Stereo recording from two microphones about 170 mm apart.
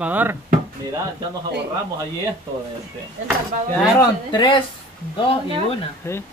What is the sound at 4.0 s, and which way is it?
Speech, 25° left (ahead or behind).